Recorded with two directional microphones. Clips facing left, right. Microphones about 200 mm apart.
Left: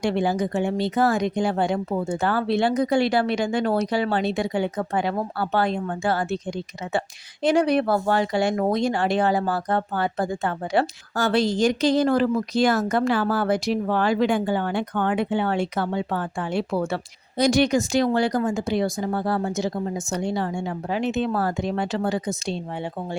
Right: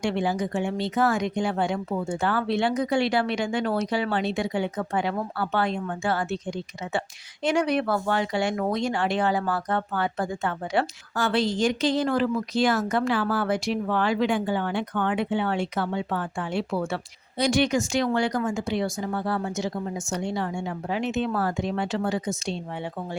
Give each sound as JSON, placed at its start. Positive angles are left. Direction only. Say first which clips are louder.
{"t": 0.0, "sound": "speech", "louder": "left 3 dB", "side_deg": 40}
{"t": 7.4, "sound": "speech", "louder": "left 4 dB", "side_deg": 35}